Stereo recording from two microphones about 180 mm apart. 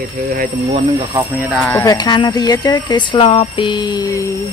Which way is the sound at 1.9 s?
25° left (ahead or behind).